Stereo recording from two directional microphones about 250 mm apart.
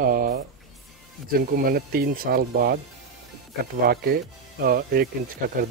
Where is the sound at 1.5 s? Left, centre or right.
Right.